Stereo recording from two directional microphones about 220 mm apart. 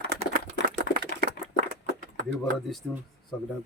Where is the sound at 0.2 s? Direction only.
40° right (ahead or behind).